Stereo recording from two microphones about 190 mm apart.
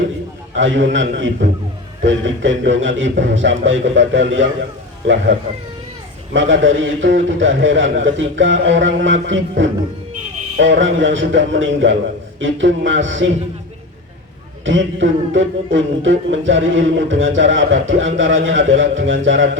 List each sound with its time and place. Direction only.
0.5 s a man's voice: 80° right
2.0 s music: 80° right
6.3 s music: 80° right
14.6 s music: 85° right